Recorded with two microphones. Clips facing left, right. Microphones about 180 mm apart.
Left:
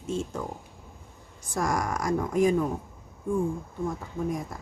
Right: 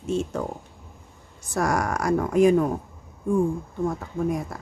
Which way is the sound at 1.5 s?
70° right (ahead or behind).